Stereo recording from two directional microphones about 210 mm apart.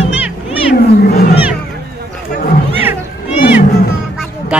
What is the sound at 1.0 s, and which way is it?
Roaring cats, 45° left (ahead or behind).